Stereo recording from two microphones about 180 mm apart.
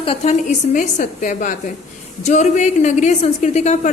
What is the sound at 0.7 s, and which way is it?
A woman's voice, 45° left (ahead or behind).